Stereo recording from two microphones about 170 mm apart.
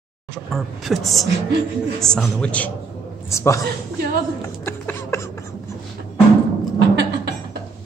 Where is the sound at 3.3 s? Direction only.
15° left (ahead or behind).